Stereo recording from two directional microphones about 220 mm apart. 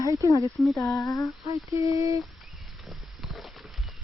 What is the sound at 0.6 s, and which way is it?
Speech, centre (ahead or behind).